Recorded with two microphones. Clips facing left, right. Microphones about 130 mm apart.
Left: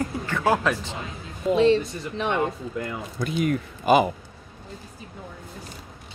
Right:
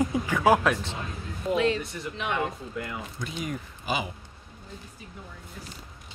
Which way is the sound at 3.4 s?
60° left (ahead or behind).